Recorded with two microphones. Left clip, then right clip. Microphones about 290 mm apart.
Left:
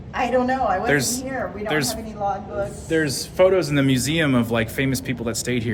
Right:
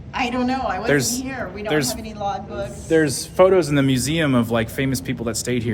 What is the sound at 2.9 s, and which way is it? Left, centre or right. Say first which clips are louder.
Speech: right 5 dB; centre.